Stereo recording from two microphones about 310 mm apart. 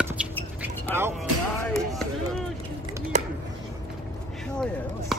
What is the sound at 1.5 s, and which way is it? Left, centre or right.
Chop, centre.